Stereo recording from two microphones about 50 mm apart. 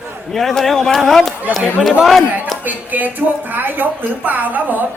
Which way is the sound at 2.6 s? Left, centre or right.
Right.